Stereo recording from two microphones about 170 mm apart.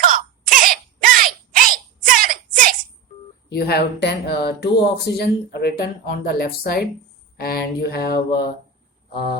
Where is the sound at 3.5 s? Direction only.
70° left (ahead or behind).